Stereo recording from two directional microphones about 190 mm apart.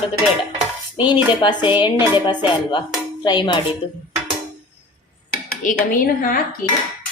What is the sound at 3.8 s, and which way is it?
Speech, 25° left (ahead or behind).